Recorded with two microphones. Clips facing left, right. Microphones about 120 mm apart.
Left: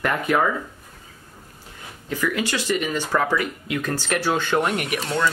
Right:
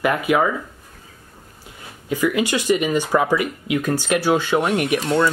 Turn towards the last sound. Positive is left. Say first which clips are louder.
# right 5 dB
turn(degrees=-25)  # may be behind; listen again after turning